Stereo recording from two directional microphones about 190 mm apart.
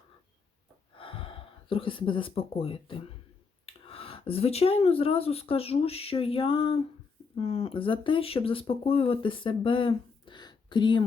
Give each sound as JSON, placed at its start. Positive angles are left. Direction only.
{"t": 0.9, "sound": "speech", "side_deg": 30}